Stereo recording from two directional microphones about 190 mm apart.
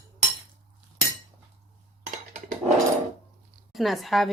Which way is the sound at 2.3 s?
40° right (ahead or behind).